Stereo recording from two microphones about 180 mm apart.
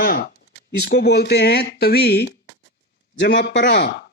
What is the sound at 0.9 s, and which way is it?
Speech, 65° left (ahead or behind).